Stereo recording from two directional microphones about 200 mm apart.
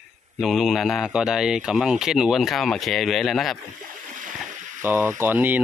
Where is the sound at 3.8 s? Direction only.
40° right (ahead or behind).